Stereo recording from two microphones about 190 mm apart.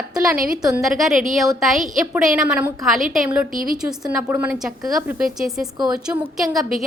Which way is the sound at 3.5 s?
45° right (ahead or behind).